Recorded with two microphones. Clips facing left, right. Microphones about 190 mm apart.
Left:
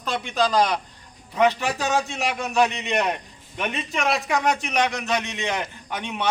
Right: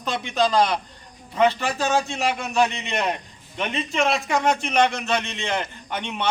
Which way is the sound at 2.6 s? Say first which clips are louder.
Left 1 dB; 5° left (ahead or behind).